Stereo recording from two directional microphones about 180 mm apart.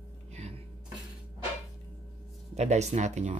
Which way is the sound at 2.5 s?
40° right (ahead or behind).